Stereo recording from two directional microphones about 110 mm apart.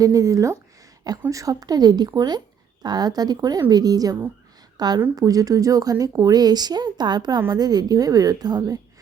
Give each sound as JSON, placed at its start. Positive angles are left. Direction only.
{"t": 0.0, "sound": "speech", "side_deg": -30}